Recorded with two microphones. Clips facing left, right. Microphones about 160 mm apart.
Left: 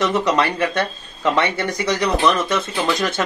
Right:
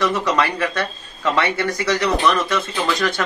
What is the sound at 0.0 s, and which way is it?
Speech, 20° left (ahead or behind).